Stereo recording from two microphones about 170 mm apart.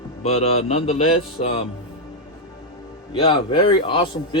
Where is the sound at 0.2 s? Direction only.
40° left (ahead or behind).